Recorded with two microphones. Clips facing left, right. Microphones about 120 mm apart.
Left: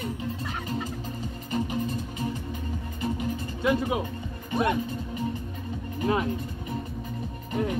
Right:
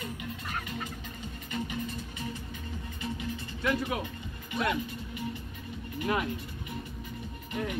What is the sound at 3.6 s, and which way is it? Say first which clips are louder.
Speech: left 5 dB; 20° left (ahead or behind).